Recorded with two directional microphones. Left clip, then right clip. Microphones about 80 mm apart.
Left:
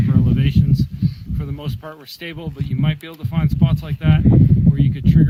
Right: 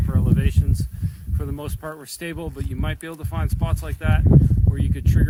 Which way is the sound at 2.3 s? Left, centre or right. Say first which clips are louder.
Left 1 dB; right.